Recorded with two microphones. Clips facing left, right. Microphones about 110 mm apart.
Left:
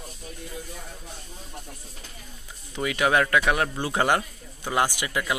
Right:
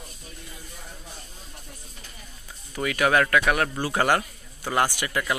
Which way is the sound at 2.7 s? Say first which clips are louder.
Right 1 dB; 20° left (ahead or behind).